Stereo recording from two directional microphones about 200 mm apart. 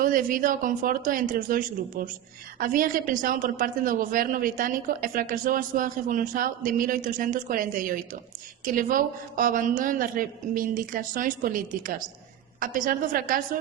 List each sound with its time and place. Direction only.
0.0 s a woman's voice: 45° right (ahead or behind)